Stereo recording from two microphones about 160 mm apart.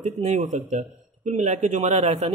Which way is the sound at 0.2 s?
45° right (ahead or behind).